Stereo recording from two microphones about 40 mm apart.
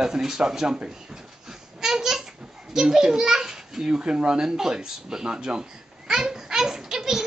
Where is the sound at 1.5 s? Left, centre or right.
Centre.